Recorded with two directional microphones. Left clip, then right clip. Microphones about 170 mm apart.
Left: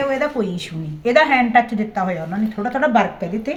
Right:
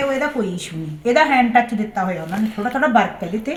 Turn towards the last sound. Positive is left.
turn(degrees=25)  # may be behind; listen again after turning